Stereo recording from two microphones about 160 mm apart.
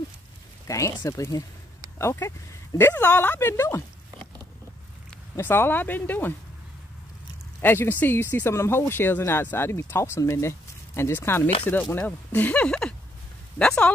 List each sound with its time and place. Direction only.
0.7 s speech: 20° left (ahead or behind)
5.3 s speech: 15° left (ahead or behind)
7.6 s speech: 15° left (ahead or behind)